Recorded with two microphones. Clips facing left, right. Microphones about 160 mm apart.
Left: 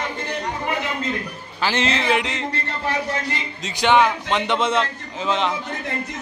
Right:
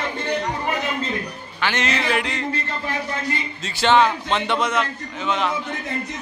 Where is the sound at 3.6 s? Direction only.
15° left (ahead or behind).